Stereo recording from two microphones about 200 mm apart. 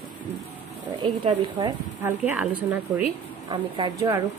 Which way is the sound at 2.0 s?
10° right (ahead or behind).